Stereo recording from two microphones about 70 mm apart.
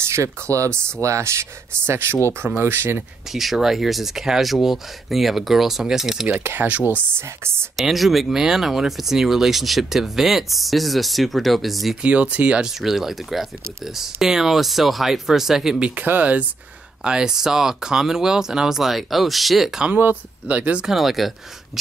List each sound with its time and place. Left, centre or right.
0.0 s speech: right
3.3 s speech: centre
6.4 s speech: right
7.7 s speech: centre
12.0 s speech: centre
16.0 s speech: right
17.0 s speech: centre
20.4 s speech: centre
20.8 s speech: centre